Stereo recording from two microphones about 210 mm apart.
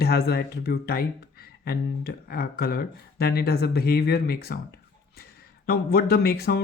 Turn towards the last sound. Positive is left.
turn(degrees=50)  # may be behind; listen again after turning